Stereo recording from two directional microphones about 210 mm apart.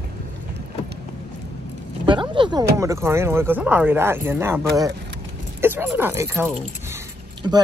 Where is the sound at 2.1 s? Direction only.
20° right (ahead or behind).